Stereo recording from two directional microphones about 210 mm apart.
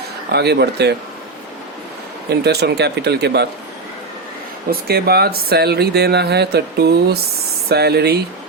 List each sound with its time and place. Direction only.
0.3 s speech: 50° right (ahead or behind)
2.4 s speech: 50° right (ahead or behind)
4.7 s speech: 50° right (ahead or behind)